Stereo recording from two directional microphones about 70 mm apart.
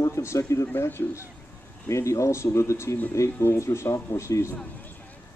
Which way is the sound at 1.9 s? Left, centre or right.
Left.